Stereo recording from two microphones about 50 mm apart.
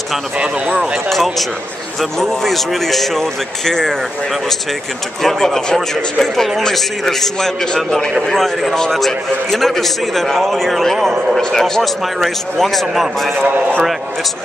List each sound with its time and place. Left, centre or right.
1.0 s a man's voice: centre
5.2 s a man's voice: centre
13.3 s a man's voice: right